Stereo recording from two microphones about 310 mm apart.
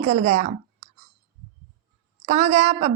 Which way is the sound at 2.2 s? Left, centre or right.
Right.